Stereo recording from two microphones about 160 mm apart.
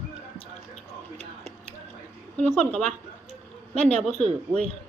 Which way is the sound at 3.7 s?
45° right (ahead or behind).